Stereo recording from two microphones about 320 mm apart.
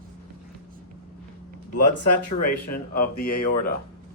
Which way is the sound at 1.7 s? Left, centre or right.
Left.